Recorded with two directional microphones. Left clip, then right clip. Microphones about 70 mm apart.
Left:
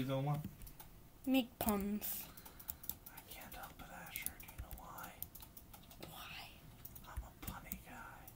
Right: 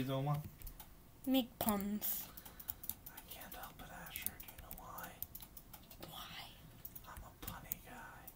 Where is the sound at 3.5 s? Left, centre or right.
Right.